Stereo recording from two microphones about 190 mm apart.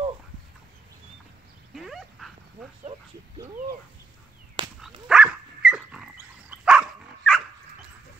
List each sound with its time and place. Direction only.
1.8 s dog: centre (ahead or behind)
4.6 s dog: 25° right (ahead or behind)
5.0 s dog: 5° right (ahead or behind)